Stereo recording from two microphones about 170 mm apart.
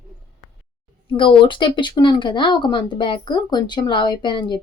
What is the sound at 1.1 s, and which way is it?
A woman's voice, 30° left (ahead or behind).